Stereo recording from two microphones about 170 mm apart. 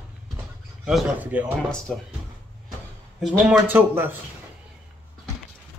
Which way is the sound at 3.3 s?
10° right (ahead or behind).